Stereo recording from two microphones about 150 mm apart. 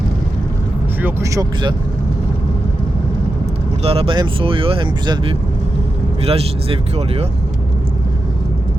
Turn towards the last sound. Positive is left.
turn(degrees=-40)  # may be behind; listen again after turning